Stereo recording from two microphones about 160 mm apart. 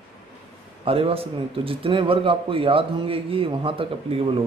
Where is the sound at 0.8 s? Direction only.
35° right (ahead or behind).